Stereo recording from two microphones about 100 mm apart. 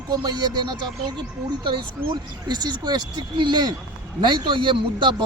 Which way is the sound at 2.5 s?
45° right (ahead or behind).